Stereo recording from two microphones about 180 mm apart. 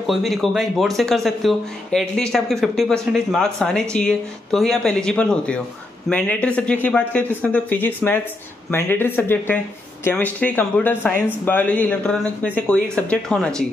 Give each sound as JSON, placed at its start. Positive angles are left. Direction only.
{"t": 0.0, "sound": "a man's voice", "side_deg": 0}